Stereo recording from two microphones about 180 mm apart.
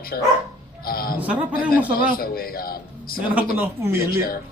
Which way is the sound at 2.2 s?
55° left (ahead or behind).